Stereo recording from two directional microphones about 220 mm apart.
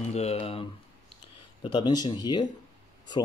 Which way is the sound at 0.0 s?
30° left (ahead or behind).